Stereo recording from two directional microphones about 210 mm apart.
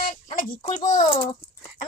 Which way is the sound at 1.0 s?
20° left (ahead or behind).